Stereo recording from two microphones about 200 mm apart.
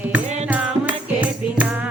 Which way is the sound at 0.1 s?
5° right (ahead or behind).